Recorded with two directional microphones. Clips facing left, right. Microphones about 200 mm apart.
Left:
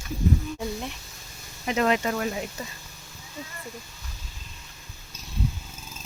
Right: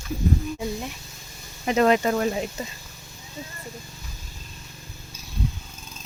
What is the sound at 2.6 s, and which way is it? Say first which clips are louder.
Speech: right 4 dB; 25° right (ahead or behind).